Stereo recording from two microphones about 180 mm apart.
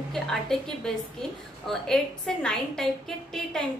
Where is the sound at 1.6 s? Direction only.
5° left (ahead or behind).